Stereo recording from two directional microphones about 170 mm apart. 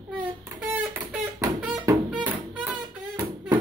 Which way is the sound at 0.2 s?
10° right (ahead or behind).